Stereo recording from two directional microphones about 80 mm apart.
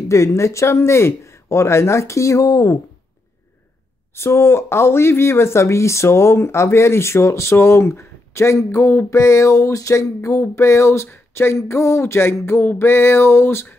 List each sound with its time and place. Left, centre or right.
0.1 s speech: left
4.1 s speech: left